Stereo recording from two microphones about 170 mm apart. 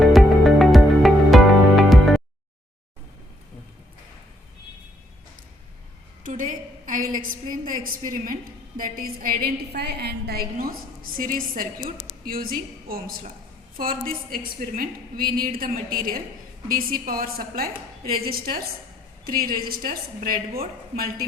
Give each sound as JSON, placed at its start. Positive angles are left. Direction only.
{"t": 0.0, "sound": "music", "side_deg": 0}
{"t": 6.2, "sound": "a sound", "side_deg": -50}
{"t": 8.8, "sound": "a woman's voice", "side_deg": -55}